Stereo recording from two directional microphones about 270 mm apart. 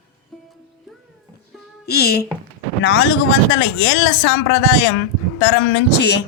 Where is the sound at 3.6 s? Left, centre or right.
Left.